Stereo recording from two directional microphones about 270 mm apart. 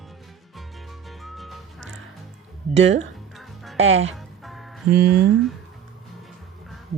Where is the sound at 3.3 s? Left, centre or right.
Centre.